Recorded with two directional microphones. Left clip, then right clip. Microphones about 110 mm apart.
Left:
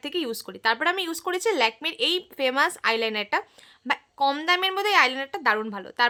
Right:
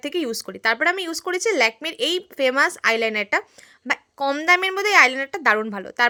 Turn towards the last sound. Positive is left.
turn(degrees=-30)  # may be behind; listen again after turning